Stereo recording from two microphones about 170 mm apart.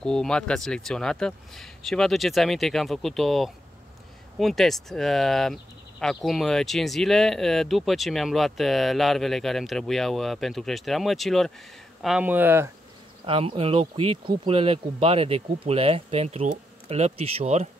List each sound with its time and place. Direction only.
0.0 s speech: 5° left (ahead or behind); by 12.7 s 15° right (ahead or behind)
13.2 s speech: 30° right (ahead or behind)